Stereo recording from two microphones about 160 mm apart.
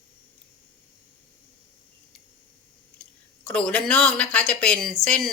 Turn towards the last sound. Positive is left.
turn(degrees=5)  # may be behind; listen again after turning